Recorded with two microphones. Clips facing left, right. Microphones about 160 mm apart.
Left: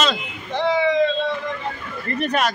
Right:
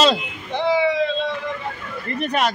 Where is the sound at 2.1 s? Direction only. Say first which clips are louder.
Even; 15° right (ahead or behind).